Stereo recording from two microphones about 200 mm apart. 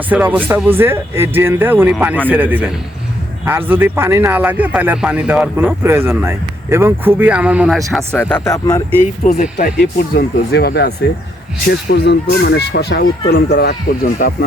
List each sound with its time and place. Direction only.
0.1 s speech: 10° right (ahead or behind)
7.9 s speech: 5° left (ahead or behind)
9.2 s speech: 40° left (ahead or behind)
10.2 s speech: 50° left (ahead or behind)